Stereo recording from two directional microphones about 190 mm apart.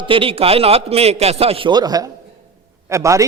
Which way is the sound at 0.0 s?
30° right (ahead or behind).